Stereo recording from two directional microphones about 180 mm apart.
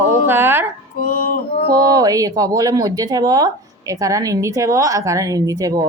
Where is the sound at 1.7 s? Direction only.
20° right (ahead or behind).